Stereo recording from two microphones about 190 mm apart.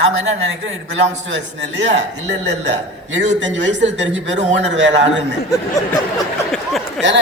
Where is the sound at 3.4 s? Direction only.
70° right (ahead or behind).